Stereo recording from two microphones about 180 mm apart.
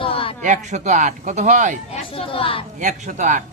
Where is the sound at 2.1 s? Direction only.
30° left (ahead or behind).